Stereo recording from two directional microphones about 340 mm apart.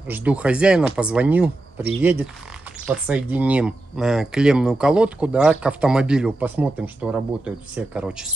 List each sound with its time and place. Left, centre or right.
0.1 s speech: centre